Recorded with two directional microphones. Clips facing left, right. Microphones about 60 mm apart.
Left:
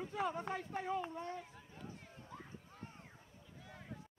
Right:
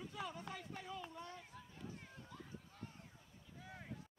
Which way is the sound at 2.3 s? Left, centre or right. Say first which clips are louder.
Left 5 dB; left.